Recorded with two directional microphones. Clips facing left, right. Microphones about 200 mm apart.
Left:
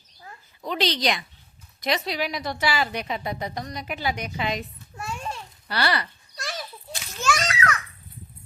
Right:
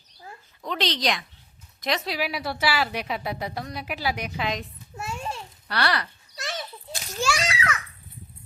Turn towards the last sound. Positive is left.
turn(degrees=-5)  # may be behind; listen again after turning